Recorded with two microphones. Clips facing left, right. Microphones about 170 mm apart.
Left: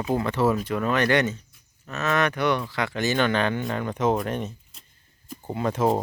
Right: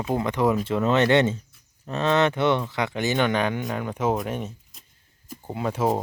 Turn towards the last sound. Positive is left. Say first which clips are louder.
# left 1 dB
turn(degrees=-5)  # may be behind; listen again after turning